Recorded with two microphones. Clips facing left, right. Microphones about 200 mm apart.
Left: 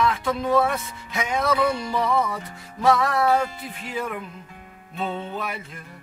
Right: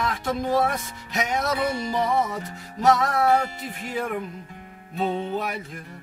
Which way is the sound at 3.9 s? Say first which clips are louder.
Right 2 dB; 40° right (ahead or behind).